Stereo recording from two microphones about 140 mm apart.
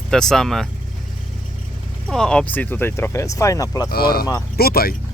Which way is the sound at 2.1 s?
5° left (ahead or behind).